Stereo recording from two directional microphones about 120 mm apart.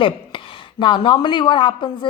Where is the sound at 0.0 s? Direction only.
45° left (ahead or behind).